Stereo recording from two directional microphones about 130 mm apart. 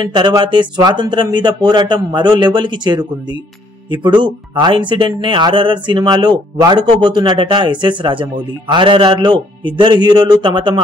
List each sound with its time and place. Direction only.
0.0 s speech: 35° right (ahead or behind)